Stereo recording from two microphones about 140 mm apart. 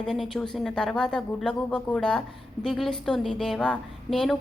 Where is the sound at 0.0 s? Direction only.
5° left (ahead or behind).